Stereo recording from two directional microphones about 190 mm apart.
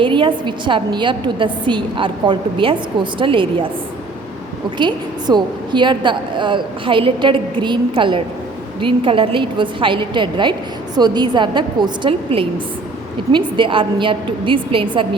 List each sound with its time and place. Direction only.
0.0 s a woman's voice: 25° right (ahead or behind)
4.8 s a woman's voice: 25° right (ahead or behind)